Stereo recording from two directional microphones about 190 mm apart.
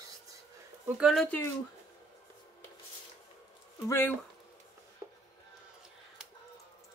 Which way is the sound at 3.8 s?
10° left (ahead or behind).